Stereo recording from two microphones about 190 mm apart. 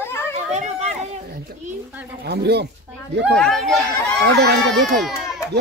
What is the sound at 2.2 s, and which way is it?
Speech, 60° right (ahead or behind).